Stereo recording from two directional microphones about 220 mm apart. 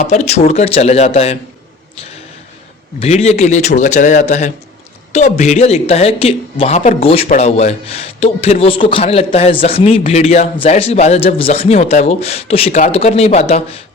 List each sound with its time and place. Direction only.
0.0 s speech: 30° left (ahead or behind)
3.0 s speech: 30° left (ahead or behind)